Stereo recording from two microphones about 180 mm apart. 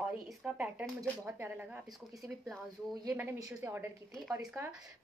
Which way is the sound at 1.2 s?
10° right (ahead or behind).